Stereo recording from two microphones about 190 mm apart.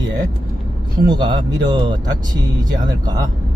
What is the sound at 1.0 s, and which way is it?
Speech, 20° right (ahead or behind).